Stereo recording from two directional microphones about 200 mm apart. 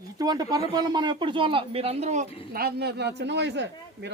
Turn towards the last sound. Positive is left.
turn(degrees=-60)  # may be behind; listen again after turning